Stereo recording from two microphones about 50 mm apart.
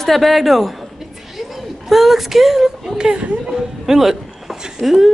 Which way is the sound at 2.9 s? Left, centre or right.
Centre.